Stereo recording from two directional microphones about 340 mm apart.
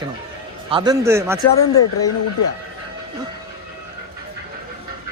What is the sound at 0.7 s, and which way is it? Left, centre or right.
Speech, centre.